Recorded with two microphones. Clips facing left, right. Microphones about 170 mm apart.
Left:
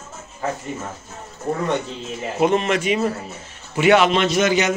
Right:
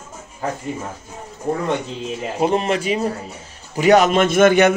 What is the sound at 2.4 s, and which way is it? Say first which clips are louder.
A man's voice: left 1 dB; 35° right (ahead or behind).